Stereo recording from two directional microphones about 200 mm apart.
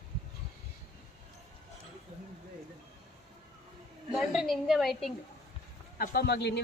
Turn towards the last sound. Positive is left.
turn(degrees=55)  # may be behind; listen again after turning